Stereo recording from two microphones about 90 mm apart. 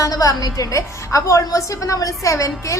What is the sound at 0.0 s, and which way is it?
A woman's voice, 40° left (ahead or behind).